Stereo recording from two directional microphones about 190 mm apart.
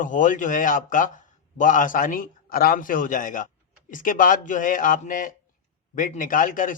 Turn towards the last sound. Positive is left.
turn(degrees=45)  # may be behind; listen again after turning